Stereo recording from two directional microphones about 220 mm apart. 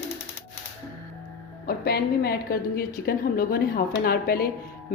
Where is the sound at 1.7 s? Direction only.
45° left (ahead or behind).